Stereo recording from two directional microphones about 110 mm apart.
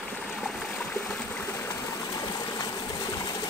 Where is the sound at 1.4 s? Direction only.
25° left (ahead or behind).